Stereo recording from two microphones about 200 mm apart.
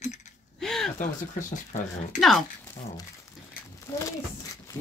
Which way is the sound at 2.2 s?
Centre (ahead or behind).